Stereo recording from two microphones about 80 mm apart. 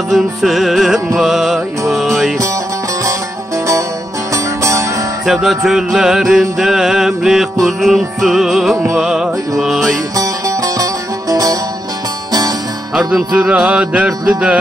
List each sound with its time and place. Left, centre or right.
0.1 s music: centre
4.3 s music: right
5.2 s music: centre
10.1 s music: right
12.9 s music: centre